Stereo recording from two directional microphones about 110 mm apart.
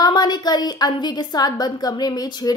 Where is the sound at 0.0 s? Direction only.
40° left (ahead or behind).